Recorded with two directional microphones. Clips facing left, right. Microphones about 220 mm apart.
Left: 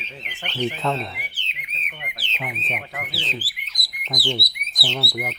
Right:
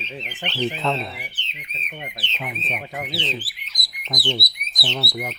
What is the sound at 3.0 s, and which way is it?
Speech, 20° right (ahead or behind).